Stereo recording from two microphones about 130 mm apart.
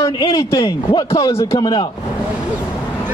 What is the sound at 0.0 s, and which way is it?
A man's voice, 30° left (ahead or behind).